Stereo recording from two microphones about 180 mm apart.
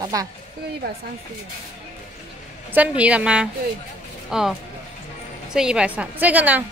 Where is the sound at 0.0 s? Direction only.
20° right (ahead or behind).